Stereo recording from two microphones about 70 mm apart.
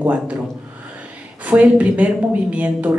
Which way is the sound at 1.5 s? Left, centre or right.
Centre.